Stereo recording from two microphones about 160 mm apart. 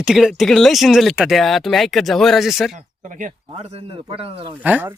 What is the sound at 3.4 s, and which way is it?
A man's voice, 40° right (ahead or behind).